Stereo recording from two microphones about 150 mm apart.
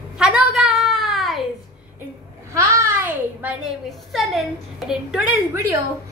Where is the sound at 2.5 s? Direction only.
20° right (ahead or behind).